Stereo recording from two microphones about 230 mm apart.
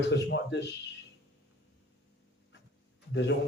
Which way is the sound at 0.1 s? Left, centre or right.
Left.